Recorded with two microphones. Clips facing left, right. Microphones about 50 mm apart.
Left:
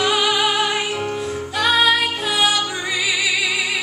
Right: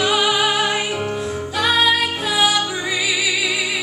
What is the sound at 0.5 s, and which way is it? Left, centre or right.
Music, centre.